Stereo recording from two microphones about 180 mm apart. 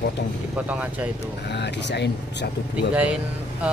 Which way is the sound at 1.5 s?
70° left (ahead or behind).